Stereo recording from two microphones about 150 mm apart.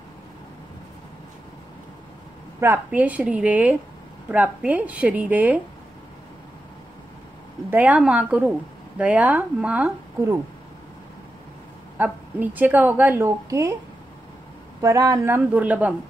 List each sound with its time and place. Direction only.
2.6 s speech: 15° right (ahead or behind)
7.7 s speech: 10° right (ahead or behind)
12.0 s speech: 10° right (ahead or behind)
14.8 s speech: 20° right (ahead or behind)